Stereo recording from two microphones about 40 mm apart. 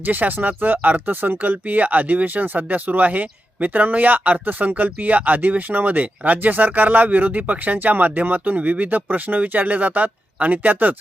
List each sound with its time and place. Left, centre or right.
0.0 s speech: right